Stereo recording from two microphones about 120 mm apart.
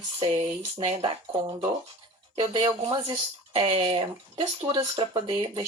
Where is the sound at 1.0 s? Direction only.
45° right (ahead or behind).